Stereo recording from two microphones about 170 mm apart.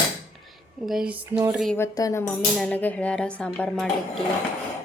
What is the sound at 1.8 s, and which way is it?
Speech, 20° left (ahead or behind).